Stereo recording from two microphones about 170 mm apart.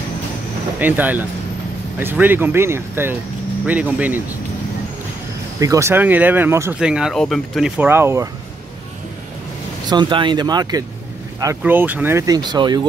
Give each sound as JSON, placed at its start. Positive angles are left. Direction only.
{"t": 0.7, "sound": "speech", "side_deg": -10}
{"t": 5.6, "sound": "speech", "side_deg": -20}
{"t": 7.9, "sound": "speech", "side_deg": -15}
{"t": 9.8, "sound": "speech", "side_deg": -25}